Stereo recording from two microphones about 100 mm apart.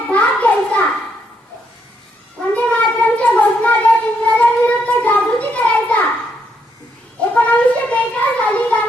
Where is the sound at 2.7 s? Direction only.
15° left (ahead or behind).